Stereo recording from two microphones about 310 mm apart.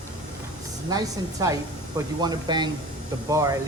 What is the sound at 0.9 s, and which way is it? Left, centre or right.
Speech, centre.